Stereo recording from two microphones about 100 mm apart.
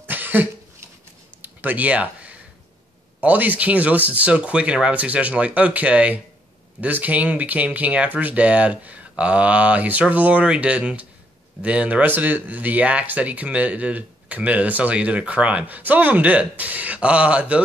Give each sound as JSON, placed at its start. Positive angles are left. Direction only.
{"t": 0.0, "sound": "cough", "side_deg": -20}
{"t": 1.4, "sound": "a sound", "side_deg": -20}
{"t": 3.2, "sound": "speech", "side_deg": -15}